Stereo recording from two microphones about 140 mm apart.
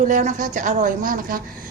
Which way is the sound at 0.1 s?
65° right (ahead or behind).